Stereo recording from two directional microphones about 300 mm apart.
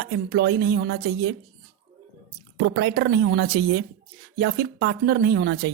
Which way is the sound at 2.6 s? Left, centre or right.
Right.